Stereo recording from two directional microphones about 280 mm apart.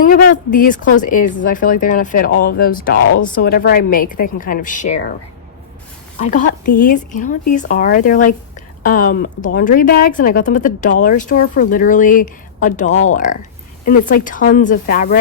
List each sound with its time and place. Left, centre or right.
0.0 s speech: left
6.1 s speech: left